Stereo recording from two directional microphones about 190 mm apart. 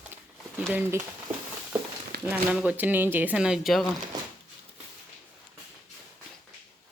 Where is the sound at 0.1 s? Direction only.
10° right (ahead or behind).